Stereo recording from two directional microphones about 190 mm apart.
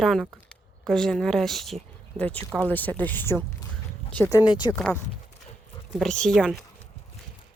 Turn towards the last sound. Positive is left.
turn(degrees=5)  # may be behind; listen again after turning